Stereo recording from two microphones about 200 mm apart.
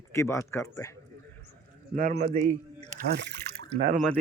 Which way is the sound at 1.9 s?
45° right (ahead or behind).